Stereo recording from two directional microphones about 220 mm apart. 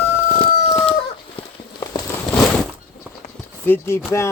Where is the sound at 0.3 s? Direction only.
25° left (ahead or behind).